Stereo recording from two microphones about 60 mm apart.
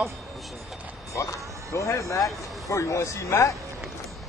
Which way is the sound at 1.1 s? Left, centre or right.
Left.